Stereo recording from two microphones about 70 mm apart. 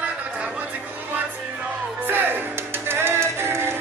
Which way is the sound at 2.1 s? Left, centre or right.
Right.